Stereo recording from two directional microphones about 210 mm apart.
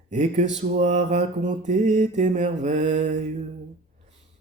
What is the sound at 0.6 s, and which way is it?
Mantra, 35° right (ahead or behind).